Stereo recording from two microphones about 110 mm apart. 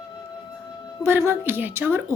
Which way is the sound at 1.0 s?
20° right (ahead or behind).